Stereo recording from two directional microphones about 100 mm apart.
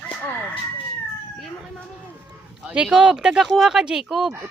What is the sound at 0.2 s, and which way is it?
Chicken, 15° left (ahead or behind).